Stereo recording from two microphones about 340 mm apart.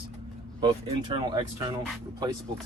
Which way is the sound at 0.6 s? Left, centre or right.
Centre.